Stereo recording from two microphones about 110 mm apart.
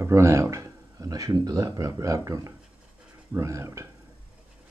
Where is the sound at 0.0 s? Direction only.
25° right (ahead or behind).